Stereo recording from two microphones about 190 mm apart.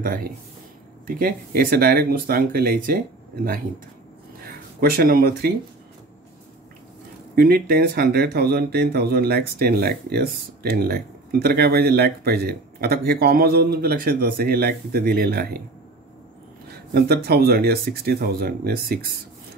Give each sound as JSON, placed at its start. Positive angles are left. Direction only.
{"t": 0.0, "sound": "speech", "side_deg": -50}
{"t": 4.4, "sound": "speech", "side_deg": -55}
{"t": 7.3, "sound": "speech", "side_deg": -55}
{"t": 16.9, "sound": "speech", "side_deg": -55}